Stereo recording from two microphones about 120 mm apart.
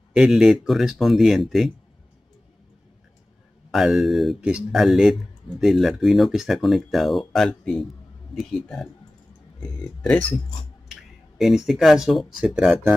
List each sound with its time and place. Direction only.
0.1 s speech: 5° right (ahead or behind)
3.7 s speech: centre (ahead or behind)
10.9 s speech: centre (ahead or behind)